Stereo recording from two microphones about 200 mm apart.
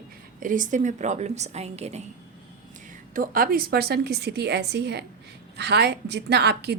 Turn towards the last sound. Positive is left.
turn(degrees=-55)  # may be behind; listen again after turning